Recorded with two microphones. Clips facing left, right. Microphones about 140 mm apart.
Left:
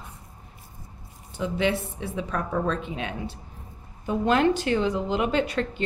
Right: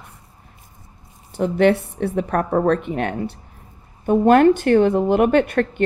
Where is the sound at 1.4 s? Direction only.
60° right (ahead or behind).